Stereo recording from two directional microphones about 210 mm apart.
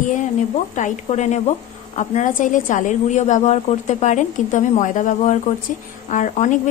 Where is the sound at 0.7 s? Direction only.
35° left (ahead or behind).